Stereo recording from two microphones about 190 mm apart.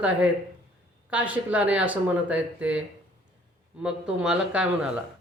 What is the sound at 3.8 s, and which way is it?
A man's voice, 5° right (ahead or behind).